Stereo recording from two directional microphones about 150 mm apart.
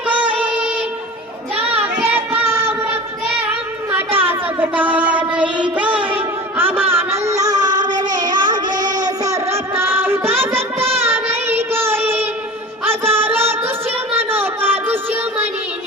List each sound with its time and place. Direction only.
0.1 s music: 10° right (ahead or behind)
1.5 s children playing: 10° right (ahead or behind)
2.1 s child singing: 15° right (ahead or behind)
12.8 s music: 15° right (ahead or behind)
14.1 s a sound: 15° right (ahead or behind)